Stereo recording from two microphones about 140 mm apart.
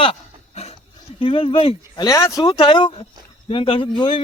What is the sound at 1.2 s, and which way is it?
Speech, 40° left (ahead or behind).